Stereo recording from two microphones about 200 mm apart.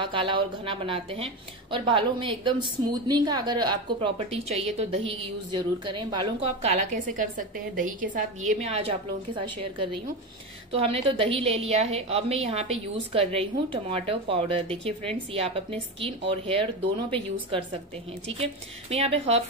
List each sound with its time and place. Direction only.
0.0 s a woman's voice: 25° right (ahead or behind)